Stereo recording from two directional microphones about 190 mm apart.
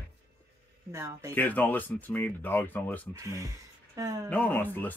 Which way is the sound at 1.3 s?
10° left (ahead or behind).